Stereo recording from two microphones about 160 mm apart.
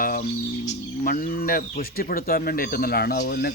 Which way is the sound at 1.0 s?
65° left (ahead or behind).